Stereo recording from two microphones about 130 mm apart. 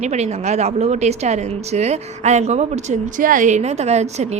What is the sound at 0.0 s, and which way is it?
A woman's voice, 60° right (ahead or behind).